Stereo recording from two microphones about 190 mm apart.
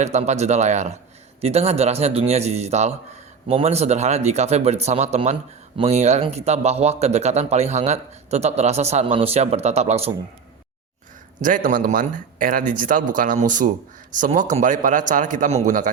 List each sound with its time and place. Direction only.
0.0 s speech: 35° right (ahead or behind)
11.3 s speech: 45° right (ahead or behind)